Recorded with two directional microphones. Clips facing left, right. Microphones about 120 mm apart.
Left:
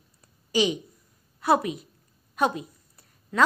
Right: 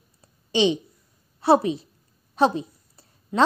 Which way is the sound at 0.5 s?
25° right (ahead or behind).